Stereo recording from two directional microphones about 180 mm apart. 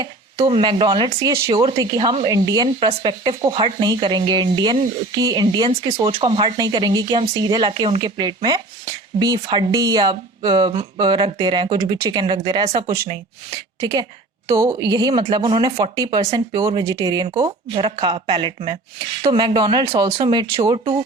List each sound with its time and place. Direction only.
0.0 s speech: 30° right (ahead or behind)